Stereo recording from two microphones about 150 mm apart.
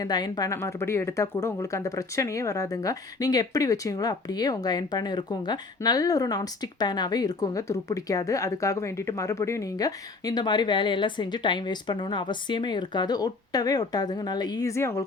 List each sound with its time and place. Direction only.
0.0 s speech: 25° left (ahead or behind)